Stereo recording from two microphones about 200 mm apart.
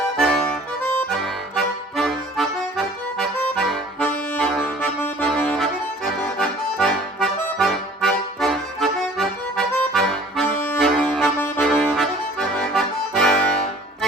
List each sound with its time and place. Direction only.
0.2 s music: centre (ahead or behind)
1.1 s accordion: centre (ahead or behind)